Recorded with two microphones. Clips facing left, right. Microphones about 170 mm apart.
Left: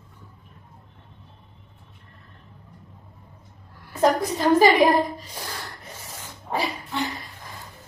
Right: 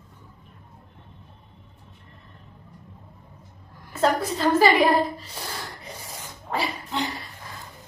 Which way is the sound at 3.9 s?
15° left (ahead or behind).